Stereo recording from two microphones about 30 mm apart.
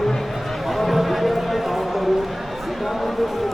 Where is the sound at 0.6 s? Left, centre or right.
Centre.